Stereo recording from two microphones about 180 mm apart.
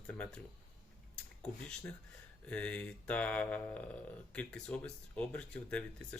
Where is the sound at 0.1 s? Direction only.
5° left (ahead or behind).